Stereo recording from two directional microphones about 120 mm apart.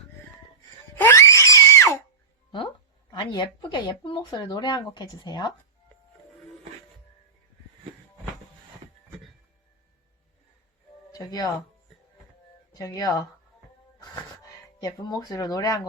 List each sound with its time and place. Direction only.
0.9 s screaming: 20° left (ahead or behind)
3.1 s speech: 40° left (ahead or behind)
11.1 s speech: 30° left (ahead or behind)
12.7 s speech: 30° left (ahead or behind)
14.8 s speech: 30° left (ahead or behind)